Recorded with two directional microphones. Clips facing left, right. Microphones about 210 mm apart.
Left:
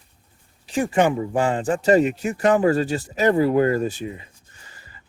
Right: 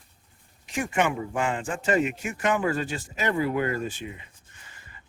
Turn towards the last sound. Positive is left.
turn(degrees=35)  # may be behind; listen again after turning